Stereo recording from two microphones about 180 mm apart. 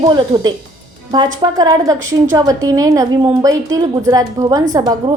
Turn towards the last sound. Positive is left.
turn(degrees=-20)  # may be behind; listen again after turning